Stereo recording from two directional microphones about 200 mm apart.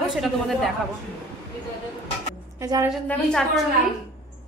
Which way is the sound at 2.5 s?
15° right (ahead or behind).